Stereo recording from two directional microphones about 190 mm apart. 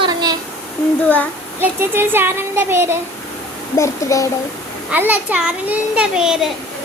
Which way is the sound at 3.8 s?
15° left (ahead or behind).